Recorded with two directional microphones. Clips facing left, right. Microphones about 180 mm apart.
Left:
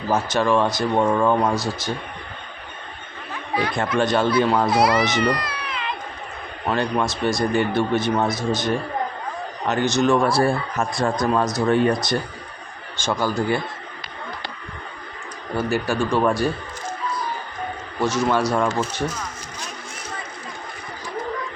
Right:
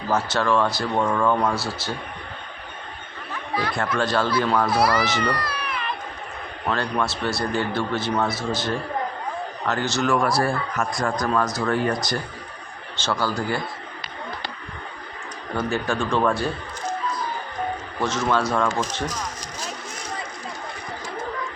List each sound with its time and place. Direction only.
0.1 s speech: 15° left (ahead or behind)
3.5 s speech: 20° left (ahead or behind)
13.0 s speech: 20° left (ahead or behind)
15.5 s speech: 10° left (ahead or behind)
18.0 s speech: 10° left (ahead or behind)